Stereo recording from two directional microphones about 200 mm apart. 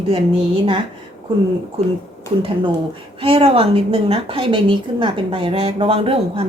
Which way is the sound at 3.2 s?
30° right (ahead or behind).